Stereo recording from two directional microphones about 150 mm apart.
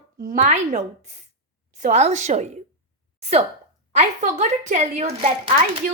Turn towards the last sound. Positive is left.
turn(degrees=-45)  # may be behind; listen again after turning